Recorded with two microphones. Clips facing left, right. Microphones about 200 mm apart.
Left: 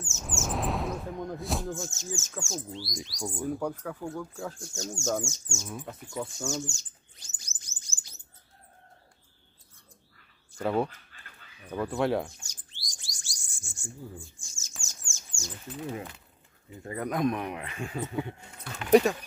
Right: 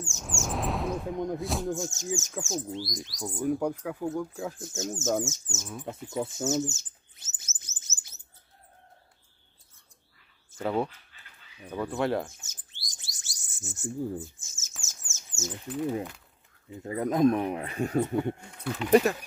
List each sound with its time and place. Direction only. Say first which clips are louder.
0.0 s chirp: even; centre (ahead or behind)
1.1 s music: right 5 dB; 20° right (ahead or behind)
1.4 s speech: right 2 dB; centre (ahead or behind)
1.7 s speech: right 4 dB; 15° right (ahead or behind)
2.9 s speech: even; centre (ahead or behind)
3.3 s speech: right 5 dB; 15° right (ahead or behind)
7.4 s chirp: right 1 dB; 20° right (ahead or behind)
10.6 s speech: left 1 dB; centre (ahead or behind)
12.4 s bird: left 1 dB; 20° right (ahead or behind)
14.6 s bird: left 1 dB; centre (ahead or behind)
15.1 s speech: right 7 dB; 20° right (ahead or behind); by 18.0 s 40° right (ahead or behind)
18.5 s speech: left 1 dB; centre (ahead or behind)